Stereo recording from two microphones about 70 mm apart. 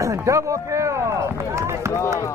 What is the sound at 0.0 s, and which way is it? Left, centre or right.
Speech, right.